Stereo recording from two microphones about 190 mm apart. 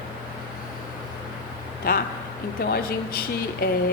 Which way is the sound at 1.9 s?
50° left (ahead or behind).